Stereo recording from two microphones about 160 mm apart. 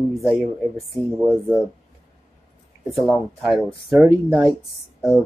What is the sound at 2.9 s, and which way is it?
Speech, centre (ahead or behind).